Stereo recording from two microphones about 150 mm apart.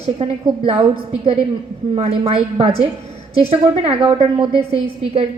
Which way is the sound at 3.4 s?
40° right (ahead or behind).